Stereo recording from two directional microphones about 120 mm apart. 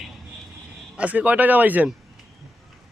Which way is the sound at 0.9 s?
10° right (ahead or behind).